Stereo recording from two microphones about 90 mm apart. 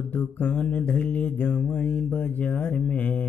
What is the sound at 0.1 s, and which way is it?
Mantra, 20° left (ahead or behind).